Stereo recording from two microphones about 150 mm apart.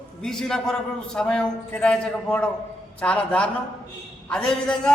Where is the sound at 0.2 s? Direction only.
5° left (ahead or behind).